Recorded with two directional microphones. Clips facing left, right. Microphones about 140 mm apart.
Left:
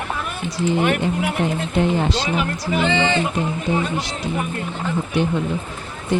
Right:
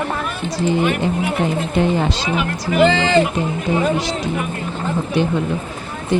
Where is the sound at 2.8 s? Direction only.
90° right.